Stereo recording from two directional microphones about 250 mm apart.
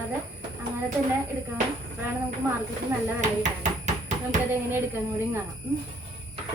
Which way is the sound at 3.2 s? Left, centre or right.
Right.